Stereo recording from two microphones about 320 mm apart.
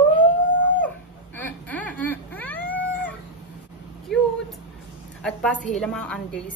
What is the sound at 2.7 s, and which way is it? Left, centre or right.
Cat, centre.